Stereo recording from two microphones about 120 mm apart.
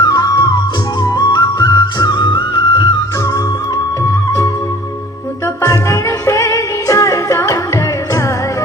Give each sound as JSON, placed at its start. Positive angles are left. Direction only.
{"t": 0.0, "sound": "music", "side_deg": 30}
{"t": 5.6, "sound": "music", "side_deg": 25}